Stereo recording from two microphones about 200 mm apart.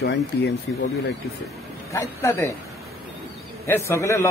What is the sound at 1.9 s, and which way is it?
Speech, 15° left (ahead or behind).